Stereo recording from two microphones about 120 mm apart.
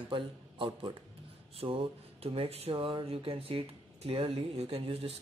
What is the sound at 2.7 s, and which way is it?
Speech, 40° right (ahead or behind).